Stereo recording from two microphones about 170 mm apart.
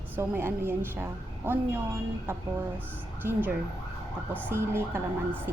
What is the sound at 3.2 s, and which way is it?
A woman's voice, 10° right (ahead or behind).